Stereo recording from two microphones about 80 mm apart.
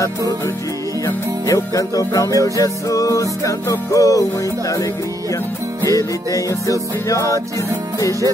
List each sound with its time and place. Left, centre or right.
1.0 s music: left
5.9 s music: left